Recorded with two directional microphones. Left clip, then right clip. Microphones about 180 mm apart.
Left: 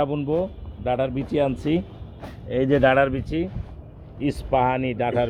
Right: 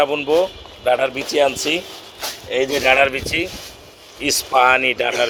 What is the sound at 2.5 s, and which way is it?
Speech, 20° left (ahead or behind).